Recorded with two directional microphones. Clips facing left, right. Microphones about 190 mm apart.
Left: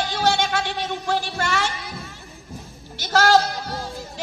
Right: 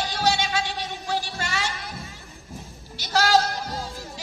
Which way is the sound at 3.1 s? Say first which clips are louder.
Left 3 dB; 55° left (ahead or behind).